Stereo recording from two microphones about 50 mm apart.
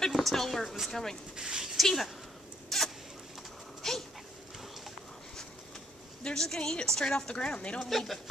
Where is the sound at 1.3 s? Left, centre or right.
Centre.